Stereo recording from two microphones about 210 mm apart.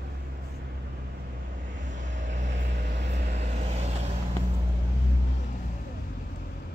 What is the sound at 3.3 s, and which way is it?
Vehicle, 35° right (ahead or behind).